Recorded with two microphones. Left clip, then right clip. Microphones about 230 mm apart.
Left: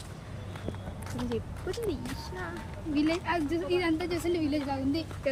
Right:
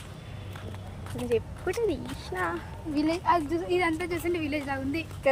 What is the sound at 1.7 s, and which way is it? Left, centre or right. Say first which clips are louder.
A woman's voice: right 5 dB; centre.